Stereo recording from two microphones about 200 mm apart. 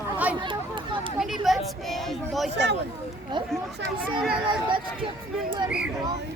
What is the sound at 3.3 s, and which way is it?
Speech, 20° right (ahead or behind).